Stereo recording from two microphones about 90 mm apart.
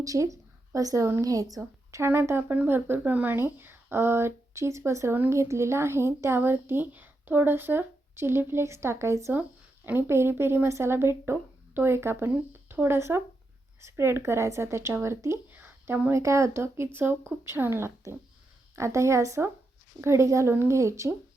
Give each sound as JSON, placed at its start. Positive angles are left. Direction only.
{"t": 0.0, "sound": "a woman's voice", "side_deg": -35}
{"t": 2.0, "sound": "a woman's voice", "side_deg": -25}
{"t": 9.3, "sound": "a woman's voice", "side_deg": -20}